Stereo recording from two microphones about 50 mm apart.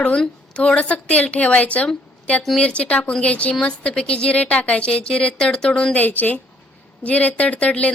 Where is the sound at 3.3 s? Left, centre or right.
Left.